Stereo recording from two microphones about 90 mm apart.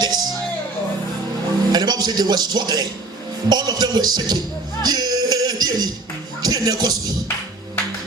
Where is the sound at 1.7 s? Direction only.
50° right (ahead or behind).